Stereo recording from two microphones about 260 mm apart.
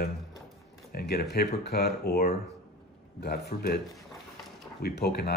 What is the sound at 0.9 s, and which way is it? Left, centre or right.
Speech, left.